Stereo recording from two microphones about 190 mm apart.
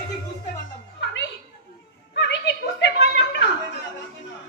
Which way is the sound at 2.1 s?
65° left (ahead or behind).